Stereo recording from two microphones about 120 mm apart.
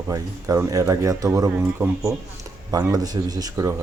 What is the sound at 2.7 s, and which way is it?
Speech, 30° right (ahead or behind).